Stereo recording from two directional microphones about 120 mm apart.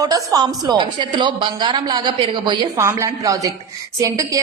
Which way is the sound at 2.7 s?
25° right (ahead or behind).